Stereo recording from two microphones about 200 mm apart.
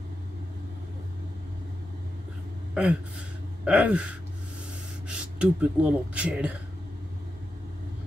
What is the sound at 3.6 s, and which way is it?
Speech, 5° right (ahead or behind).